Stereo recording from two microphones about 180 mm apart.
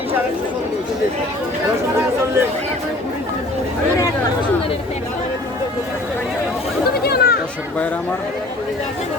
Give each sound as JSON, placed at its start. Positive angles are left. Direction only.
{"t": 7.0, "sound": "chatter", "side_deg": 60}